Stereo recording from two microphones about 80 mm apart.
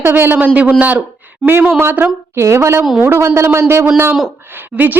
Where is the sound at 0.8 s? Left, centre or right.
Centre.